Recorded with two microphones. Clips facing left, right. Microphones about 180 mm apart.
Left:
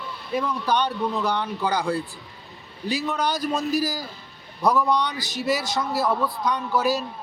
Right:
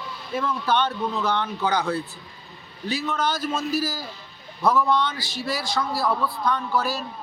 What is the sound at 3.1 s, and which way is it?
A man's voice, 15° left (ahead or behind).